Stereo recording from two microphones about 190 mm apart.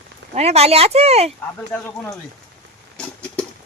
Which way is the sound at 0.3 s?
35° right (ahead or behind).